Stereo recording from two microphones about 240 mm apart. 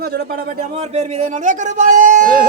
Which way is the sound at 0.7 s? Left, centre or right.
Right.